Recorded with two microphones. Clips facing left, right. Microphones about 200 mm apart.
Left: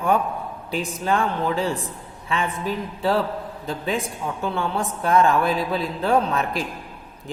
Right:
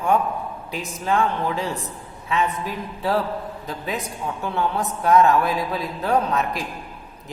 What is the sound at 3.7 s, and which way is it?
A man's voice, 30° left (ahead or behind).